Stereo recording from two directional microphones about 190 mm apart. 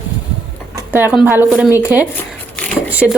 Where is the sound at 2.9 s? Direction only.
5° right (ahead or behind).